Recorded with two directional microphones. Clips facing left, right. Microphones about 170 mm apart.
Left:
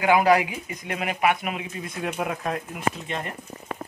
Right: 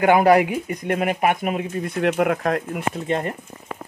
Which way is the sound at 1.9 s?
65° right (ahead or behind).